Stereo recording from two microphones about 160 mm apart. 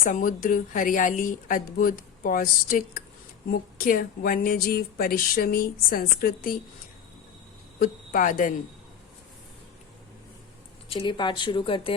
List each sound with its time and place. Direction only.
0.0 s speech: 55° left (ahead or behind)
7.8 s speech: 60° left (ahead or behind)
10.8 s speech: 30° left (ahead or behind)